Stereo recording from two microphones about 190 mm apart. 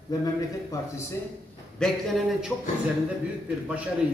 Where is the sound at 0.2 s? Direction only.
20° left (ahead or behind).